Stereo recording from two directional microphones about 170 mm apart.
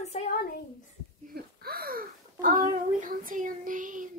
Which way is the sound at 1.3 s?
60° right (ahead or behind).